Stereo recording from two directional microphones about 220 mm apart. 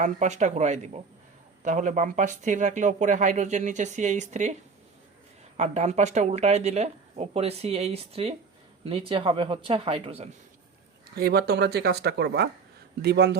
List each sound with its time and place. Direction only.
0.0 s speech: 35° right (ahead or behind)
5.5 s speech: 30° right (ahead or behind)
11.1 s speech: 45° right (ahead or behind)